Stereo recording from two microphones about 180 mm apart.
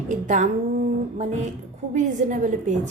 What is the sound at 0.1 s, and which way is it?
Speech, 45° right (ahead or behind).